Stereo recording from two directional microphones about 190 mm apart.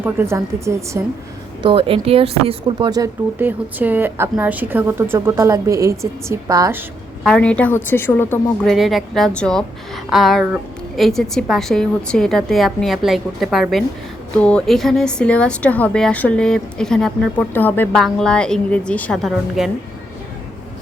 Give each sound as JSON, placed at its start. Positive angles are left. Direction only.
{"t": 0.0, "sound": "a woman's voice", "side_deg": -15}
{"t": 1.6, "sound": "a woman's voice", "side_deg": -30}
{"t": 7.3, "sound": "a woman's voice", "side_deg": 5}
{"t": 8.6, "sound": "a woman's voice", "side_deg": 0}